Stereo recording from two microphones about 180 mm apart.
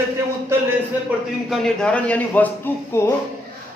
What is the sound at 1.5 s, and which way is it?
A man's voice, 5° left (ahead or behind).